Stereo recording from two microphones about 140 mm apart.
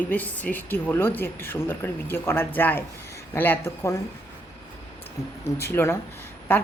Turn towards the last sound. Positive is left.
turn(degrees=15)  # may be behind; listen again after turning